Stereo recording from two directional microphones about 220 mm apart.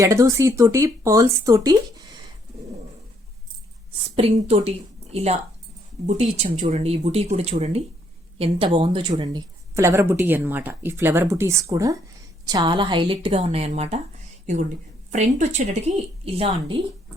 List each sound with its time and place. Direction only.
0.0 s speech: 15° right (ahead or behind)
4.1 s a woman's voice: 30° right (ahead or behind)